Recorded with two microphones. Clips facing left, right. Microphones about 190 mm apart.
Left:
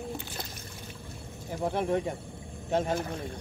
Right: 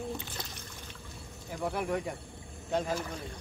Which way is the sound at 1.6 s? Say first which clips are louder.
Left 4 dB; 25° left (ahead or behind).